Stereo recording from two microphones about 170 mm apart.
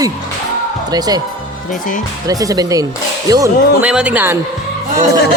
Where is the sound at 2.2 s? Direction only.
20° right (ahead or behind).